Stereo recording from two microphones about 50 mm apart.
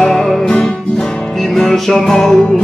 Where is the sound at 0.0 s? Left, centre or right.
Centre.